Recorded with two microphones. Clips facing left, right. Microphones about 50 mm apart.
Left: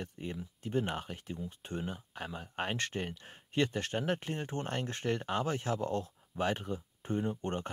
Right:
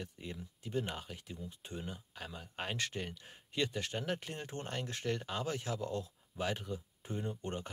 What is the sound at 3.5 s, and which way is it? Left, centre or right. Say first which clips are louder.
Speech: left 5 dB; left.